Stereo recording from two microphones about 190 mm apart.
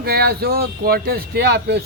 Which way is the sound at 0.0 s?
55° right (ahead or behind).